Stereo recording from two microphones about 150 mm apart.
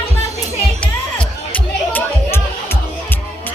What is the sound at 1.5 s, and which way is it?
Music, 10° left (ahead or behind).